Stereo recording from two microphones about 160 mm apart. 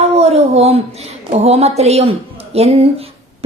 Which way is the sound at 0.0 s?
40° right (ahead or behind).